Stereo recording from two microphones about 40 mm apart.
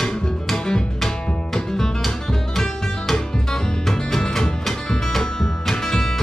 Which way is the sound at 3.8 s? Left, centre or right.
Centre.